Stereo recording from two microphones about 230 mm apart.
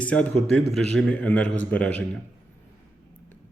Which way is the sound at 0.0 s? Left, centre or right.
Centre.